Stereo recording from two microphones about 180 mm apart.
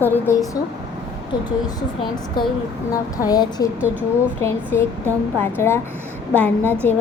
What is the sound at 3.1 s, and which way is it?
A woman's voice, 20° left (ahead or behind).